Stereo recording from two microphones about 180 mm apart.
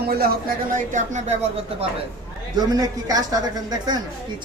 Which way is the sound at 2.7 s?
20° right (ahead or behind).